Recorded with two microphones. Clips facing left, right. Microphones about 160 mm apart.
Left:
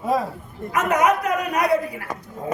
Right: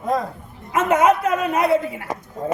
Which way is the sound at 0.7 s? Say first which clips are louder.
Right 3 dB; 25° right (ahead or behind).